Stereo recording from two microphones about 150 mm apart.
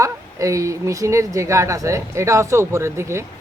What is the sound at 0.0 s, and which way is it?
A woman's voice, 20° right (ahead or behind).